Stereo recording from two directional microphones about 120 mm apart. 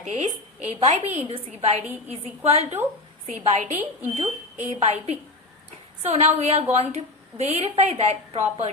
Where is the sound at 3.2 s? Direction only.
90° right.